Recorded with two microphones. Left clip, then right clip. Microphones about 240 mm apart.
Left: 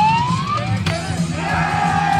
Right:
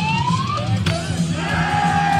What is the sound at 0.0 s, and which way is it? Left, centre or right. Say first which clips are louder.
Police car: left 5 dB; centre.